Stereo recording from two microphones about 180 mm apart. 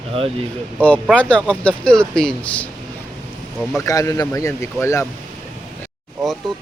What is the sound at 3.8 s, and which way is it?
Speech, 20° left (ahead or behind).